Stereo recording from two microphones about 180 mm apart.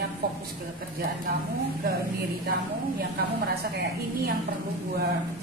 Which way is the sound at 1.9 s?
60° right (ahead or behind).